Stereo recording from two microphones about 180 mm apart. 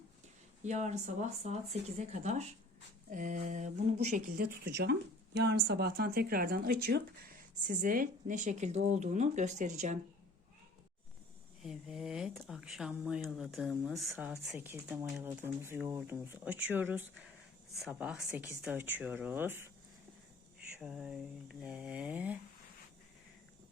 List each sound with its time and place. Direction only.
0.6 s speech: 40° right (ahead or behind)
4.4 s speech: 65° right (ahead or behind); by 10.0 s 40° right (ahead or behind)
11.6 s speech: 5° right (ahead or behind)
20.7 s speech: 5° right (ahead or behind)